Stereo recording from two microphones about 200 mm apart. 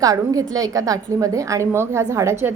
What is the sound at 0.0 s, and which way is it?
A woman's voice, 15° right (ahead or behind).